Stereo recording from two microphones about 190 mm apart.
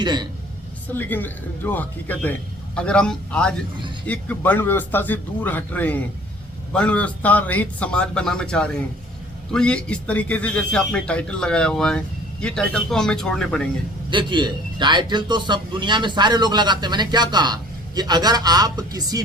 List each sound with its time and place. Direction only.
0.0 s a man's voice: 25° right (ahead or behind)
0.9 s speech: 10° left (ahead or behind)
14.1 s a man's voice: 25° right (ahead or behind)